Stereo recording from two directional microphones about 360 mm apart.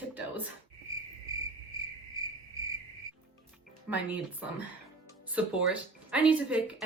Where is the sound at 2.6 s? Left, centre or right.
Centre.